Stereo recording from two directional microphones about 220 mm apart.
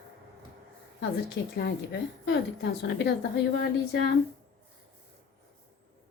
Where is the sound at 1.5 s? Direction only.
50° left (ahead or behind).